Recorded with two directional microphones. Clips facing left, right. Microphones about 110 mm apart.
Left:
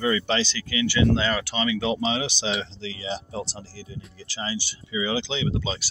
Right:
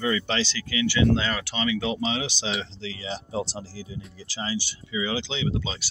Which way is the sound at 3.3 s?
20° right (ahead or behind).